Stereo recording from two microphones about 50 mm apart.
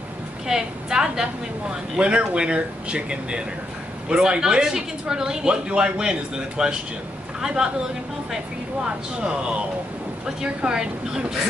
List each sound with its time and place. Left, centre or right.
0.5 s a woman's voice: centre
8.8 s a woman's voice: centre